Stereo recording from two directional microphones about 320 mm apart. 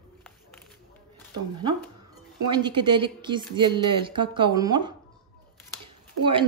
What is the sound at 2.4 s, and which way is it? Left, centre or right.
Speech, centre.